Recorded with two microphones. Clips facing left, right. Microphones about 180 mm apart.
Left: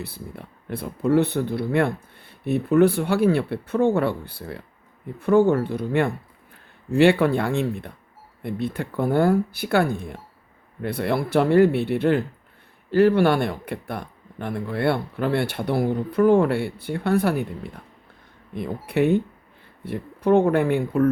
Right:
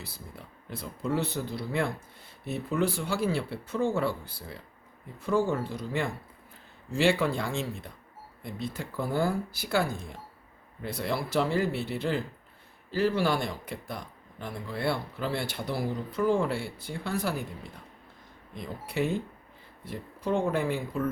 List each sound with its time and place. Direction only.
0.0 s speech: 60° left (ahead or behind)
18.5 s speech: 60° left (ahead or behind)